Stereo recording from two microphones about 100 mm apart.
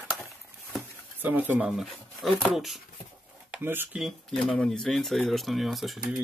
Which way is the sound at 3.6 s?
20° right (ahead or behind).